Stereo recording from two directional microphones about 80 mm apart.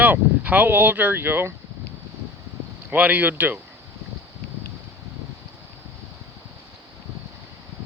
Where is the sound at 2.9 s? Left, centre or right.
Right.